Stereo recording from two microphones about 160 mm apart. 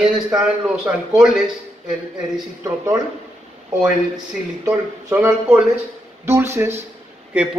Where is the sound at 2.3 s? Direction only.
20° right (ahead or behind).